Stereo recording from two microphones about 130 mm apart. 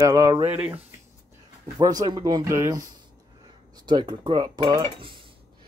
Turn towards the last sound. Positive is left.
turn(degrees=-40)  # may be behind; listen again after turning